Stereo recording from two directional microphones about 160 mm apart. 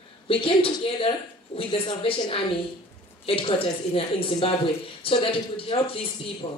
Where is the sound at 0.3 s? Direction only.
35° left (ahead or behind).